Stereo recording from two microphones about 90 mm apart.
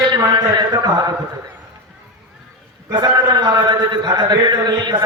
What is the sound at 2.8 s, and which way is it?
A man's voice, 50° right (ahead or behind).